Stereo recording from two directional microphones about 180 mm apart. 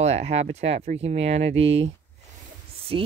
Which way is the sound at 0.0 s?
35° right (ahead or behind).